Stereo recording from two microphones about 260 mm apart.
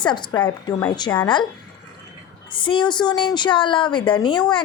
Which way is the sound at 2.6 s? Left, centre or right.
Centre.